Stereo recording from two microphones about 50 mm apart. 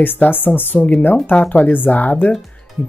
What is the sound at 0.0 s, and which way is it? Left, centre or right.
Speech, left.